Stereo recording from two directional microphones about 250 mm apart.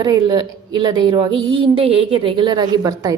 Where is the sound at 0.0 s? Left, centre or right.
Centre.